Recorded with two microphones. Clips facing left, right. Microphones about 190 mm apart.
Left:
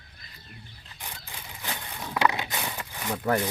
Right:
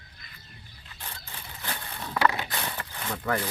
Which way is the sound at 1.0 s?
15° left (ahead or behind).